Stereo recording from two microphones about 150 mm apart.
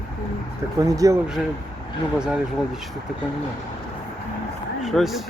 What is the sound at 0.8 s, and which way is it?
Speech, 25° right (ahead or behind).